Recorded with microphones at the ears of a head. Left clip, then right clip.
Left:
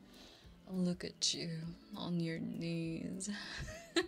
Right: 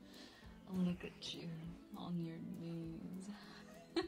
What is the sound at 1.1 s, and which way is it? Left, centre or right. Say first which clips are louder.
Speech: left 11 dB; left.